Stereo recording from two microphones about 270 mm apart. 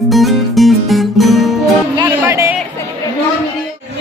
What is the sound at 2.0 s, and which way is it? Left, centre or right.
Music, centre.